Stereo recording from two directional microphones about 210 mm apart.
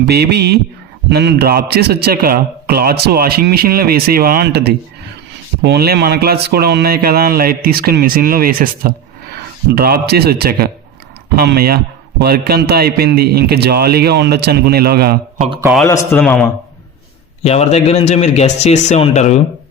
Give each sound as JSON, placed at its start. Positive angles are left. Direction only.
{"t": 0.1, "sound": "a man's voice", "side_deg": -50}
{"t": 15.9, "sound": "a man's voice", "side_deg": 5}
{"t": 17.4, "sound": "speech", "side_deg": 30}